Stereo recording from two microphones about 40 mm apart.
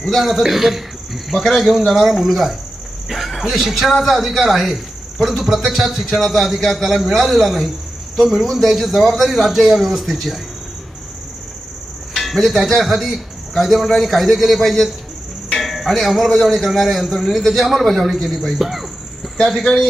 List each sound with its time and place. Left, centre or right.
0.1 s a man's voice: centre
12.1 s a man's voice: centre
19.7 s a man's voice: left